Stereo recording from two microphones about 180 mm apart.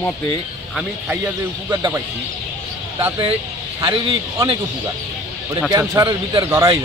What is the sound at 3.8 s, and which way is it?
Speech, 25° right (ahead or behind).